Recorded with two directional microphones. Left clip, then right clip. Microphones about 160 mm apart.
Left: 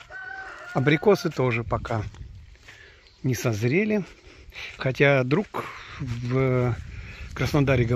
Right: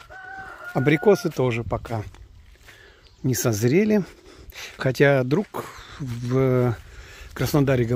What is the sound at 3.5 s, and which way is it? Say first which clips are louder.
Speech: right 5 dB; 50° right (ahead or behind).